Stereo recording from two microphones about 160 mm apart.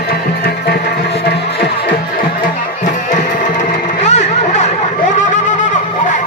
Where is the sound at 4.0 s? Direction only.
45° left (ahead or behind).